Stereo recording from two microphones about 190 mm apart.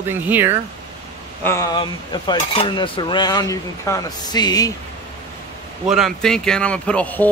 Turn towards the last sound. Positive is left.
turn(degrees=10)  # may be behind; listen again after turning